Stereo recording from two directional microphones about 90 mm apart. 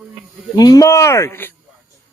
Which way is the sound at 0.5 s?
45° left (ahead or behind).